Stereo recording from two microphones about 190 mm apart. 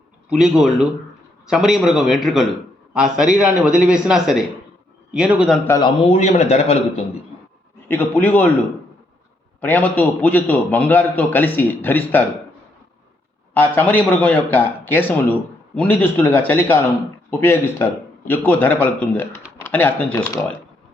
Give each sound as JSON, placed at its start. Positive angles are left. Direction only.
{"t": 0.3, "sound": "speech", "side_deg": 0}
{"t": 5.6, "sound": "a man's voice", "side_deg": 15}
{"t": 6.1, "sound": "a man's voice", "side_deg": 35}
{"t": 7.9, "sound": "a man's voice", "side_deg": 10}
{"t": 9.6, "sound": "a man's voice", "side_deg": 10}
{"t": 13.5, "sound": "a man's voice", "side_deg": 10}